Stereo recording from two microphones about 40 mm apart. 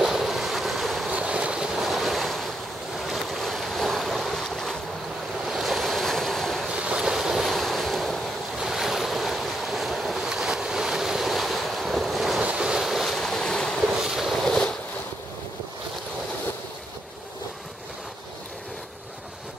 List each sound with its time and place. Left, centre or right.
0.0 s waves: centre
1.1 s vehicle: right
1.8 s waves: centre
3.1 s boat: centre
5.4 s waves: centre
6.7 s boat: right
7.2 s waves: centre
7.4 s waves: centre
8.5 s waves: centre
10.2 s waves: centre
12.4 s waves: right
12.8 s waves: centre
13.2 s waves: centre
14.0 s boat: centre